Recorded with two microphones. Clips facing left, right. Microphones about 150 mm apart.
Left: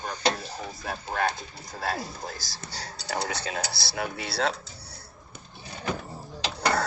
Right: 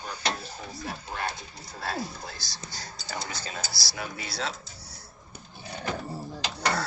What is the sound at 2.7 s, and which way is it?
Speech, 70° left (ahead or behind).